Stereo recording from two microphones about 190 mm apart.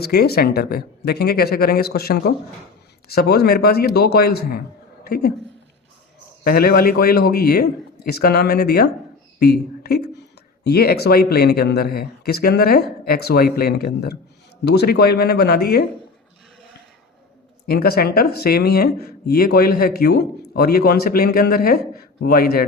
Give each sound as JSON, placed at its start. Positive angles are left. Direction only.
{"t": 0.0, "sound": "a woman's voice", "side_deg": 55}
{"t": 6.4, "sound": "speech", "side_deg": 50}
{"t": 17.7, "sound": "speech", "side_deg": 55}